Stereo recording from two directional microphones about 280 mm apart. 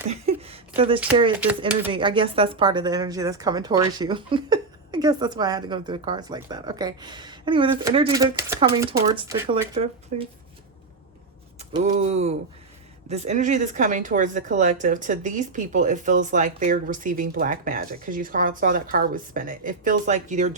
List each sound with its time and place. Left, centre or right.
0.1 s a sound: right
1.4 s speech: centre
1.9 s speech: centre
11.7 s speech: right